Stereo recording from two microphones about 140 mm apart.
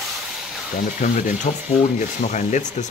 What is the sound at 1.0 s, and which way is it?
Stir, 60° left (ahead or behind).